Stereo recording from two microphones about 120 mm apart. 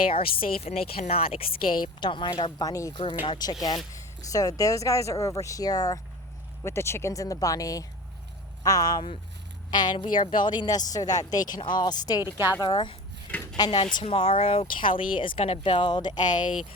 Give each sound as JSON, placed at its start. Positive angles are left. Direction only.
{"t": 0.1, "sound": "speech", "side_deg": 55}
{"t": 2.0, "sound": "speech", "side_deg": 40}
{"t": 12.2, "sound": "a woman's voice", "side_deg": -20}
{"t": 12.6, "sound": "speech", "side_deg": 40}
{"t": 13.9, "sound": "speech", "side_deg": 50}